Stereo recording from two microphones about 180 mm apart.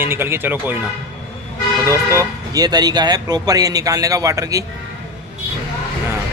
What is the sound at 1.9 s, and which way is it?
Speech, 15° right (ahead or behind).